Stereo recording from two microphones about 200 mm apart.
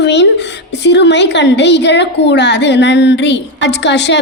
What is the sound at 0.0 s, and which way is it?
A woman's voice, 60° left (ahead or behind).